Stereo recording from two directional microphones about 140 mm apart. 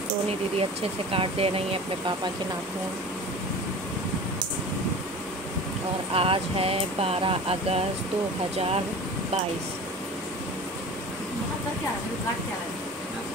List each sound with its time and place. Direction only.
1.1 s speech: 40° right (ahead or behind)
6.1 s speech: 45° right (ahead or behind)